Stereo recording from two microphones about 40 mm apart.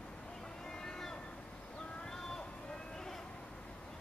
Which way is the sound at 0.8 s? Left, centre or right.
Centre.